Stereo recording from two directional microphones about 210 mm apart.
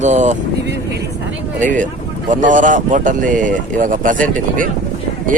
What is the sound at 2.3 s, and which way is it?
Speech, 40° right (ahead or behind).